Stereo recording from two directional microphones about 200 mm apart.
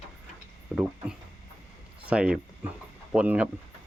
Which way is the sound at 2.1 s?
5° right (ahead or behind).